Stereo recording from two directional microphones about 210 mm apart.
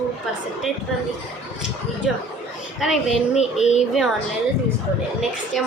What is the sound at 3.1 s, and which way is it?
Speech, 30° left (ahead or behind).